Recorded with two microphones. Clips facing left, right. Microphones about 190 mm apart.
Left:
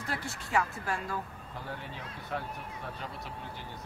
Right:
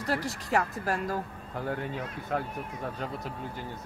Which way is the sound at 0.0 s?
40° right (ahead or behind).